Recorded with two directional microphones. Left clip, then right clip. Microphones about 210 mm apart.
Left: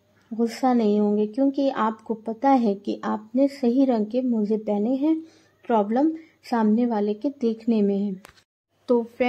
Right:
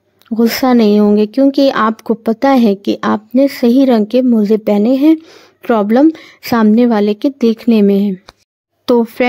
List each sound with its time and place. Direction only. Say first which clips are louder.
0.3 s speech: right 11 dB; 45° right (ahead or behind)